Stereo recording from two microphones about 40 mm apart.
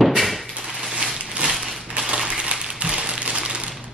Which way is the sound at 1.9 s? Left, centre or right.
Centre.